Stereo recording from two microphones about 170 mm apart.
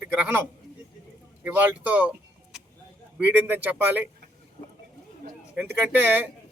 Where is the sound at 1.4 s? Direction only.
10° right (ahead or behind).